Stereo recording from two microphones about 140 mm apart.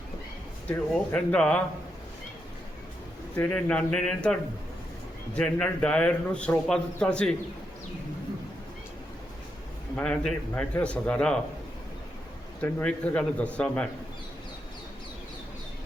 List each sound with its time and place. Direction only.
0.7 s a man's voice: 10° left (ahead or behind)
3.3 s a man's voice: 10° left (ahead or behind)
9.9 s a man's voice: 5° left (ahead or behind)
12.6 s a man's voice: 10° left (ahead or behind)